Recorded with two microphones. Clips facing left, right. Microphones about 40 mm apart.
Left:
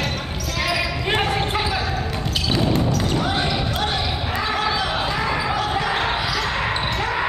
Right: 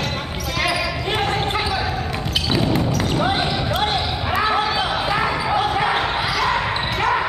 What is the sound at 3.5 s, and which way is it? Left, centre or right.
Basketball bounce, centre.